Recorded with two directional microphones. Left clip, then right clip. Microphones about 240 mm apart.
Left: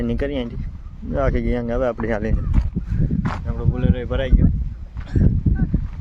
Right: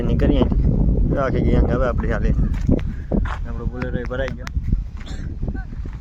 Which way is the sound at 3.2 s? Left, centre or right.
Centre.